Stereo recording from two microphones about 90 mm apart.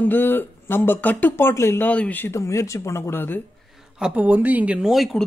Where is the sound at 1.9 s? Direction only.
15° left (ahead or behind).